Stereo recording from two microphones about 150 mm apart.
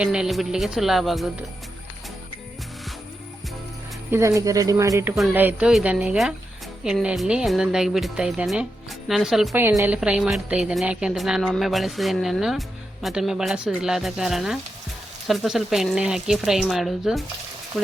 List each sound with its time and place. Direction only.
0.0 s speech: 5° right (ahead or behind)
4.1 s speech: 20° right (ahead or behind); by 9.6 s centre (ahead or behind)
9.6 s speech: 15° right (ahead or behind)